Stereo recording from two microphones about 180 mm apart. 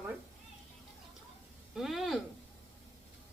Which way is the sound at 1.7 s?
Centre (ahead or behind).